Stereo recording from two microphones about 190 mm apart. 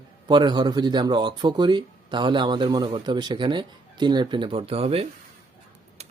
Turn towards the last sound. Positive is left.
turn(degrees=-30)  # may be behind; listen again after turning